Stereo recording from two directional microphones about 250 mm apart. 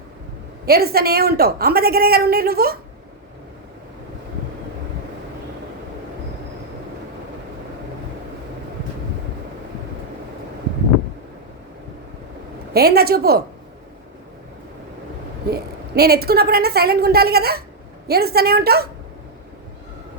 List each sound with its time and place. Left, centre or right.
0.6 s a woman's voice: right
12.7 s a woman's voice: right
15.4 s a woman's voice: right